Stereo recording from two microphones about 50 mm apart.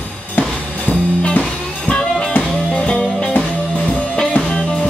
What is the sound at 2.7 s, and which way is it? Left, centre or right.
Music, centre.